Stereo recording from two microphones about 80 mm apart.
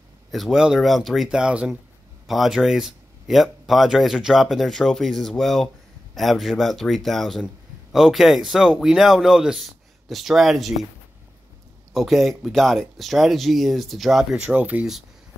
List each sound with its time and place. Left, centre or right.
0.3 s speech: centre
11.9 s speech: centre
14.3 s speech: centre